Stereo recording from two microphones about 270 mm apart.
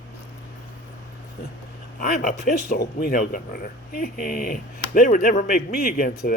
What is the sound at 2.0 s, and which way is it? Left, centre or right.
Speech, left.